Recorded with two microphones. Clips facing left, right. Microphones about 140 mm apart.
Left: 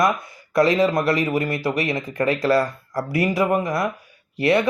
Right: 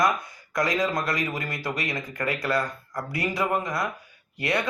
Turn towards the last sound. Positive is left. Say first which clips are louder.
# left 9 dB
turn(degrees=25)  # may be behind; listen again after turning